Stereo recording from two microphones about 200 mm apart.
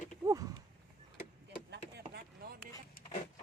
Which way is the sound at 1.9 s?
50° right (ahead or behind).